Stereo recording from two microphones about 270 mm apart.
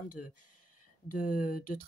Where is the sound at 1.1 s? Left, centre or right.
Left.